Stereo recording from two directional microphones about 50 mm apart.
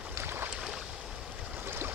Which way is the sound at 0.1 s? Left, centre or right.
Right.